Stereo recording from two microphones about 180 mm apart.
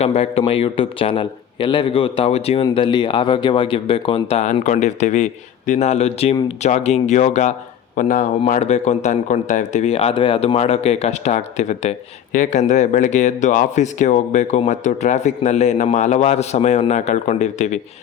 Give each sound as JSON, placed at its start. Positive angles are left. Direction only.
{"t": 0.0, "sound": "speech", "side_deg": 35}